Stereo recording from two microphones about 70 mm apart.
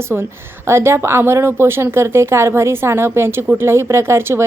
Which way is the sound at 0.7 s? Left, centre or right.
Right.